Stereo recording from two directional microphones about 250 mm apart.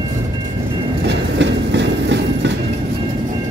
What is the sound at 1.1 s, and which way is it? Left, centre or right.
Train, right.